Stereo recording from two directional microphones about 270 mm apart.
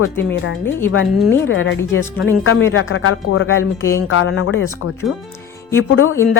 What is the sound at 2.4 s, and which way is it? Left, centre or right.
Speech, left.